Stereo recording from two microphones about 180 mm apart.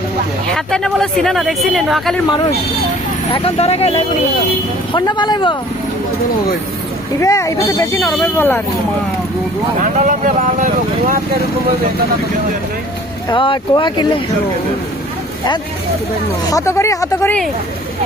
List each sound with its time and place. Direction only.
0.5 s speech: 5° left (ahead or behind)
3.3 s speech: 35° left (ahead or behind)
4.9 s speech: 25° left (ahead or behind)
7.2 s speech: 15° left (ahead or behind)
9.8 s speech: 45° right (ahead or behind)
13.3 s speech: 25° left (ahead or behind)
16.5 s speech: 20° left (ahead or behind)